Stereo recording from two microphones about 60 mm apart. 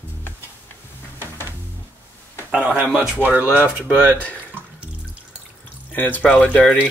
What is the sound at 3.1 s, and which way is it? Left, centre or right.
Speech, right.